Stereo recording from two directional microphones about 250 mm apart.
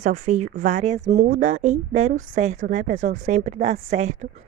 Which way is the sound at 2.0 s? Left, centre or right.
Right.